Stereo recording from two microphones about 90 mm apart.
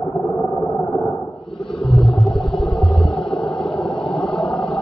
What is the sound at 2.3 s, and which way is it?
Vehicle, 80° left.